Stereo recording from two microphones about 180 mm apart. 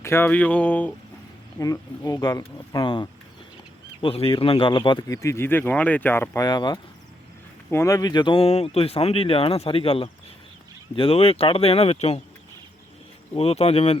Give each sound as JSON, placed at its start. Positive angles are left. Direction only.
{"t": 0.0, "sound": "speech", "side_deg": 15}
{"t": 1.5, "sound": "speech", "side_deg": 20}
{"t": 13.3, "sound": "speech", "side_deg": 35}